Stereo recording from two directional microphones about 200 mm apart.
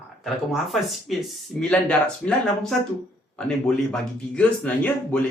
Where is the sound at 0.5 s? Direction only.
Centre (ahead or behind).